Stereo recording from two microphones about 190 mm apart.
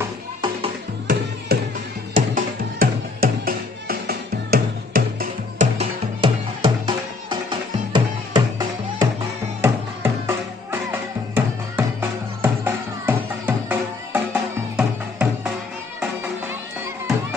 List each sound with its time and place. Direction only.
1.5 s music: 55° right (ahead or behind)
5.8 s music: 25° right (ahead or behind); by 15.5 s 5° right (ahead or behind)